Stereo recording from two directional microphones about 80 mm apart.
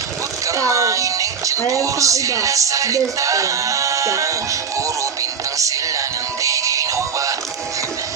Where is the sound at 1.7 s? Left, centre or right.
Right.